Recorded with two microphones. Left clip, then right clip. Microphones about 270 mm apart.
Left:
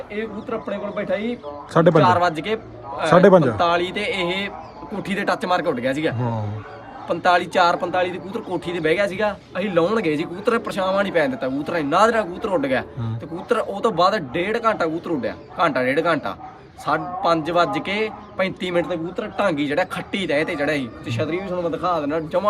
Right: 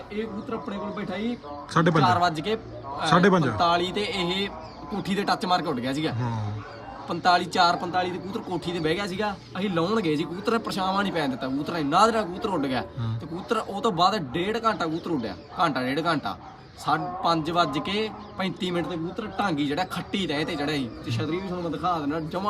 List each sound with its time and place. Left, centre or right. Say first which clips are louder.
2.0 s speech: left 5 dB; centre
3.1 s a man's voice: left 8 dB; centre
3.6 s speech: left 3 dB; centre